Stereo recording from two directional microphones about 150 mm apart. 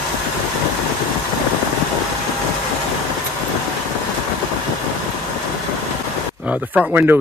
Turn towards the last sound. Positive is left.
turn(degrees=-10)  # may be behind; listen again after turning